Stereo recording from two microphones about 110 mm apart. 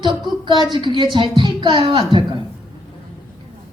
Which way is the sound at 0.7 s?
45° right (ahead or behind).